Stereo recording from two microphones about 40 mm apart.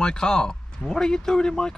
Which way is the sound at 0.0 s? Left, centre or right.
Centre.